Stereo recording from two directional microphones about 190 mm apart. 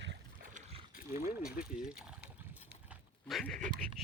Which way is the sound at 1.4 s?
50° left (ahead or behind).